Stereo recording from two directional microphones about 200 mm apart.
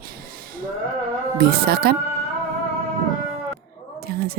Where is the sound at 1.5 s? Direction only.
50° right (ahead or behind).